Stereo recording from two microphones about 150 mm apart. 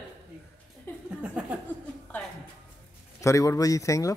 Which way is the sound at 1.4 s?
10° right (ahead or behind).